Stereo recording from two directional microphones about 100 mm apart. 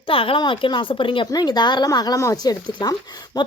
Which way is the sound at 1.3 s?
45° left (ahead or behind).